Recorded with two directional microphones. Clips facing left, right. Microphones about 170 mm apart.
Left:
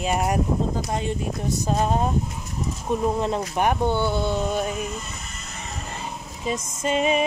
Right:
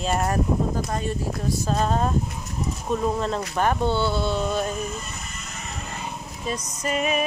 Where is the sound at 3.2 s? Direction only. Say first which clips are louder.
Left 1 dB; 15° left (ahead or behind).